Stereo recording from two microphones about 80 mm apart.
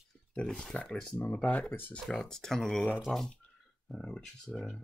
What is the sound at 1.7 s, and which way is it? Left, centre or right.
Speech, left.